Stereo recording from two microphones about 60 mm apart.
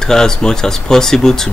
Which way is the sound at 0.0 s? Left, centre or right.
Centre.